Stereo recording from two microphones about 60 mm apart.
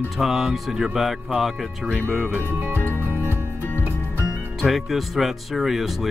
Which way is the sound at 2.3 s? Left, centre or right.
Right.